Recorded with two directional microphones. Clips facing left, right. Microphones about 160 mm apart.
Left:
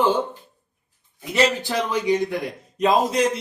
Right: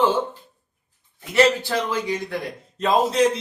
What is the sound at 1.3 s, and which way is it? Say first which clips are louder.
A man's voice: right 2 dB; 20° left (ahead or behind).